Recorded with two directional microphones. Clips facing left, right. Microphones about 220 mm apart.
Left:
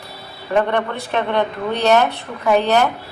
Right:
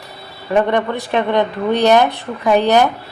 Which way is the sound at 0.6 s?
15° right (ahead or behind).